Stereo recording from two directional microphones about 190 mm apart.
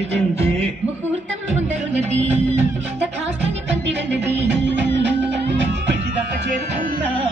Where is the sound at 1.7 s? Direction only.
35° right (ahead or behind).